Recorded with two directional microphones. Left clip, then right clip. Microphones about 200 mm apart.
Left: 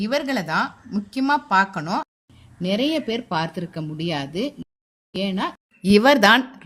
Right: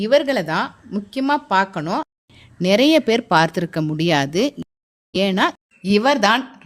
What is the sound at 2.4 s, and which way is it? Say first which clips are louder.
A woman's voice: right 8 dB; 60° right (ahead or behind).